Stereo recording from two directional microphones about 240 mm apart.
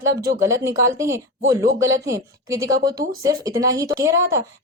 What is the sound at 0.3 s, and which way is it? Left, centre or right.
Speech, centre.